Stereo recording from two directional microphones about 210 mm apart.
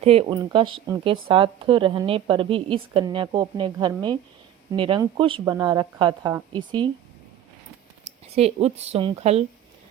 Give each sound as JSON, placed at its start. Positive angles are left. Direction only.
{"t": 0.0, "sound": "a woman's voice", "side_deg": -30}
{"t": 8.0, "sound": "speech", "side_deg": -30}